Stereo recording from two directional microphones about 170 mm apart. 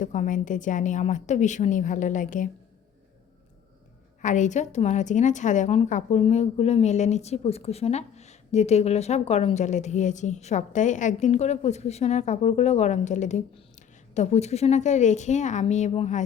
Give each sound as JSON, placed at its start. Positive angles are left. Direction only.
{"t": 0.0, "sound": "a woman's voice", "side_deg": 45}
{"t": 4.2, "sound": "a woman's voice", "side_deg": 45}